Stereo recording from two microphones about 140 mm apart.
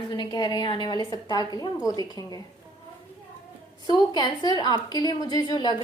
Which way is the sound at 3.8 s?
30° left (ahead or behind).